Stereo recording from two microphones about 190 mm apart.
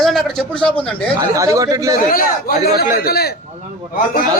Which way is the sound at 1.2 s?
15° right (ahead or behind).